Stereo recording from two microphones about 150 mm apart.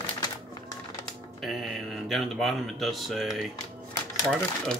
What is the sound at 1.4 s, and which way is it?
Speech, centre (ahead or behind).